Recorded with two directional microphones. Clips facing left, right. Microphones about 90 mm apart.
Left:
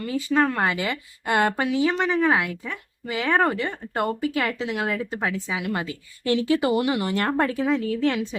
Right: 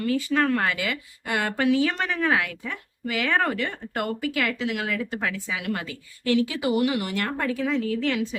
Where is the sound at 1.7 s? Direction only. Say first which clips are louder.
Left 1 dB; 15° left (ahead or behind).